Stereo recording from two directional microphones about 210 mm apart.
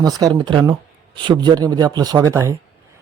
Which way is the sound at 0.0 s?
20° right (ahead or behind).